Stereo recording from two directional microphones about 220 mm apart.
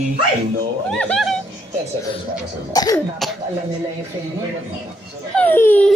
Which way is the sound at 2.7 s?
15° left (ahead or behind).